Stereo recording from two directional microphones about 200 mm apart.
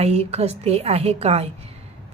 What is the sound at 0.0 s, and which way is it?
A woman's voice, 30° right (ahead or behind).